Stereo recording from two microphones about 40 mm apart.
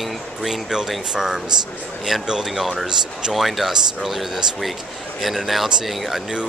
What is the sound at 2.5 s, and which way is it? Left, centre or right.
Speech, centre.